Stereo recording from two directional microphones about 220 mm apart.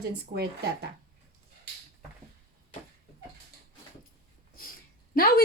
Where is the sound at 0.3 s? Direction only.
50° right (ahead or behind).